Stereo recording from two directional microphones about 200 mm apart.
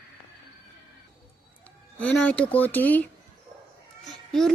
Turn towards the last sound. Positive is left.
turn(degrees=0)  # may be behind; listen again after turning